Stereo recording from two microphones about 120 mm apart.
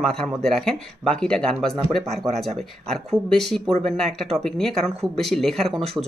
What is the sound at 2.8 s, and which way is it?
Speech, 5° left (ahead or behind).